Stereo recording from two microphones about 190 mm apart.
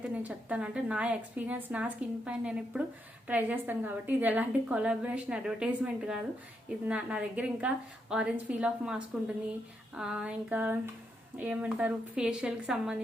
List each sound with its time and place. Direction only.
0.0 s a woman's voice: 5° right (ahead or behind)